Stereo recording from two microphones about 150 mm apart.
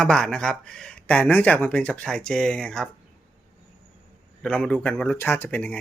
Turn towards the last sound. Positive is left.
turn(degrees=10)  # may be behind; listen again after turning